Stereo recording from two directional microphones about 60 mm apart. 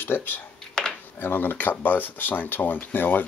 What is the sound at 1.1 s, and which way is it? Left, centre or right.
Speech, left.